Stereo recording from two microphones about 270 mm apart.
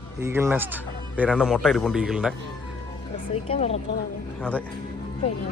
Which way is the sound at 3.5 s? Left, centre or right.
Left.